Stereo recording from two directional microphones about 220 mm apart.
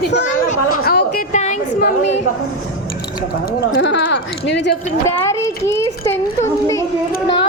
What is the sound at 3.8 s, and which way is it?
Speech, 55° left (ahead or behind).